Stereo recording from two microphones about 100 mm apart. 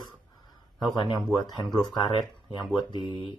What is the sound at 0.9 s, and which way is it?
Speech, 45° left (ahead or behind).